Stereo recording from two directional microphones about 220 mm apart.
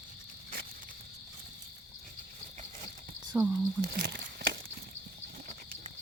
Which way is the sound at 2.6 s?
30° right (ahead or behind).